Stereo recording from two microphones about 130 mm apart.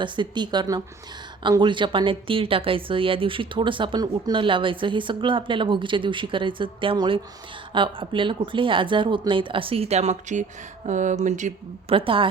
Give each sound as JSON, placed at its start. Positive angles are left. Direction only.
{"t": 0.0, "sound": "a woman's voice", "side_deg": -35}
{"t": 10.8, "sound": "speech", "side_deg": -75}
{"t": 11.9, "sound": "a woman's voice", "side_deg": -45}